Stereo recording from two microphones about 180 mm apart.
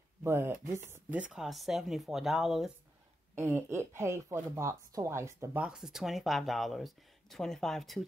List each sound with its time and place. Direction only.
0.2 s speech: 15° right (ahead or behind)
3.3 s speech: 15° right (ahead or behind); by 8.0 s centre (ahead or behind)